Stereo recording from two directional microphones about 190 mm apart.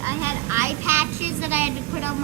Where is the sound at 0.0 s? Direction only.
15° right (ahead or behind).